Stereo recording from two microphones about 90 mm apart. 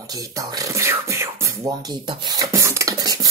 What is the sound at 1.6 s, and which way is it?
Speech, 55° right (ahead or behind).